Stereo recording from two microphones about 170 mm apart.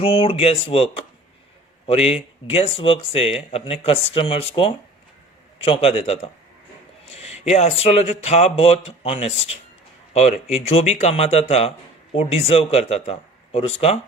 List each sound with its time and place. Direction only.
0.0 s speech: 30° left (ahead or behind)